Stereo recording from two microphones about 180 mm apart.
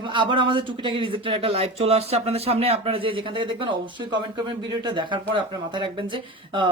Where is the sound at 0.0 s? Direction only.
25° right (ahead or behind).